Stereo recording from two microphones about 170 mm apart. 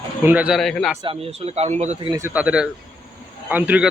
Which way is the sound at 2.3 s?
5° right (ahead or behind).